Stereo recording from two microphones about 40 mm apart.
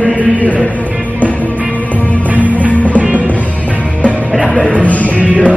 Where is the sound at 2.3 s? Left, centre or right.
Right.